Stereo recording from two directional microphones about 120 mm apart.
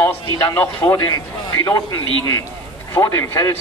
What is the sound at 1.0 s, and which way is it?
A man's voice, 30° left (ahead or behind).